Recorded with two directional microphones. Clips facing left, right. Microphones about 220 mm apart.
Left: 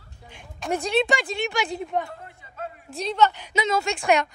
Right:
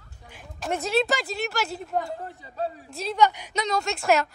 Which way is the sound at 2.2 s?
35° right (ahead or behind).